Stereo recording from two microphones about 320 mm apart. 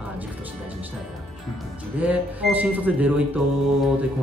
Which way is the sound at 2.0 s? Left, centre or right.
Centre.